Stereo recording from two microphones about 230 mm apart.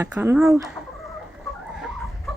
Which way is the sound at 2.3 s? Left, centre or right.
Centre.